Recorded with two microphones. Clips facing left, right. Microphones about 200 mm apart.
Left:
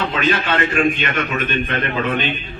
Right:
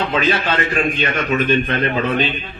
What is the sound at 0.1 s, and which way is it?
A man's voice, 35° right (ahead or behind).